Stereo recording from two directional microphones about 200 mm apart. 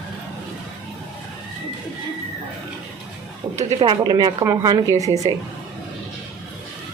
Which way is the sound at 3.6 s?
30° right (ahead or behind).